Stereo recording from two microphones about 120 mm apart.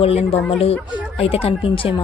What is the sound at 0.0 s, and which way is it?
Speech, 55° left (ahead or behind).